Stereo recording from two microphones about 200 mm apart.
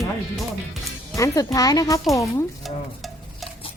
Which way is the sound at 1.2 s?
15° left (ahead or behind).